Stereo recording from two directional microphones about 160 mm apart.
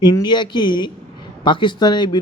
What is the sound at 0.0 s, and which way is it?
Speech, 25° left (ahead or behind).